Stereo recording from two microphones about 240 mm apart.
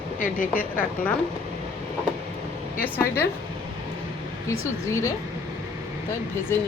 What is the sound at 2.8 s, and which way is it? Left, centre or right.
Speech, centre.